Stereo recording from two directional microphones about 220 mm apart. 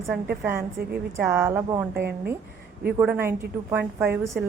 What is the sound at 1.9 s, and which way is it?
Speech, 45° right (ahead or behind).